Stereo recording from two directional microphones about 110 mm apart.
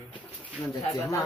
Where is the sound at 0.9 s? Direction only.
30° left (ahead or behind).